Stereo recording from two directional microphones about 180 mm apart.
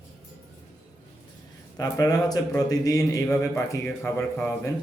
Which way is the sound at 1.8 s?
20° left (ahead or behind).